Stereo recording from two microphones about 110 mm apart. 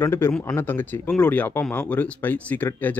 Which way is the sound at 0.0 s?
20° left (ahead or behind).